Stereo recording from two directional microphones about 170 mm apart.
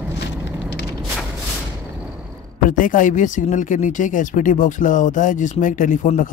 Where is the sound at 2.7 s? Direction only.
50° left (ahead or behind).